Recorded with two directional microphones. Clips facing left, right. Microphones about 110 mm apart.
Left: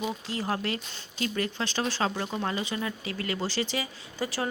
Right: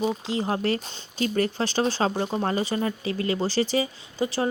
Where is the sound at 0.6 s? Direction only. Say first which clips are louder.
Right 7 dB; 35° right (ahead or behind).